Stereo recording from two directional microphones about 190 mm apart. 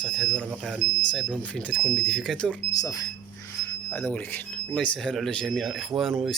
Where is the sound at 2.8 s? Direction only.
20° left (ahead or behind).